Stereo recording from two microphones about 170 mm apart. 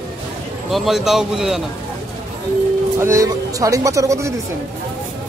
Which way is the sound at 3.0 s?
20° right (ahead or behind).